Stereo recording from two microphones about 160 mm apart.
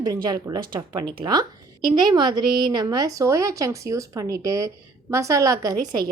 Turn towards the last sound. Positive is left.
turn(degrees=-25)  # may be behind; listen again after turning